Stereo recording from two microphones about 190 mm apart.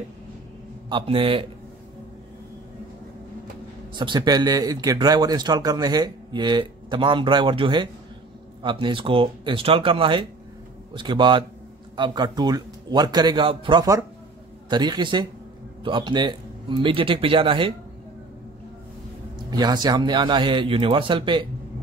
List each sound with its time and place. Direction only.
0.8 s speech: 25° right (ahead or behind)
3.9 s speech: 25° right (ahead or behind)
19.3 s speech: 20° right (ahead or behind)